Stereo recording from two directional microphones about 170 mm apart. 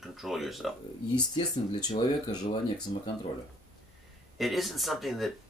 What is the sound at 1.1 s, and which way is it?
Speech, 25° left (ahead or behind).